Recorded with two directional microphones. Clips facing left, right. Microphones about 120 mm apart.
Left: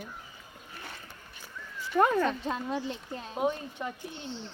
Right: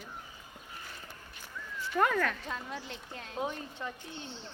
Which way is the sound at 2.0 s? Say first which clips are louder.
Left 4 dB; 20° left (ahead or behind).